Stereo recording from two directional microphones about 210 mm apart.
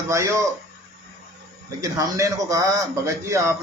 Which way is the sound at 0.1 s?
15° right (ahead or behind).